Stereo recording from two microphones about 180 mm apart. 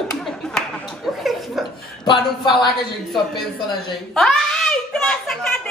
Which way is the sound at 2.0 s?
25° left (ahead or behind).